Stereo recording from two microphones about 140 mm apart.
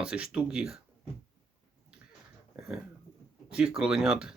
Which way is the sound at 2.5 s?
5° right (ahead or behind).